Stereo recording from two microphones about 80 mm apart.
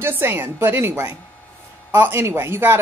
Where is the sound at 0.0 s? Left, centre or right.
Right.